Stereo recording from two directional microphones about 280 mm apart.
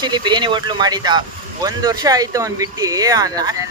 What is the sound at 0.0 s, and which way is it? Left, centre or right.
Speech, centre.